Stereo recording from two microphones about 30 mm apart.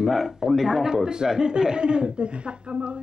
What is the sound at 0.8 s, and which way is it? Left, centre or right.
Speech, right.